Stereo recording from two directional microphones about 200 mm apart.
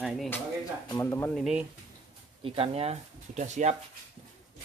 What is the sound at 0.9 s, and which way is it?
Speech, 10° left (ahead or behind).